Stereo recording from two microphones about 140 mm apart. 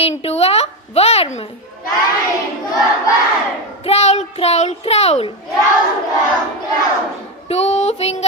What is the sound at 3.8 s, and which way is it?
A child's voice, 50° left (ahead or behind).